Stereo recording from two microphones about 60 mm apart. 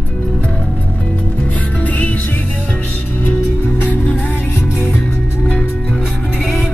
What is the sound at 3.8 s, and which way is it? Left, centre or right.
Music, left.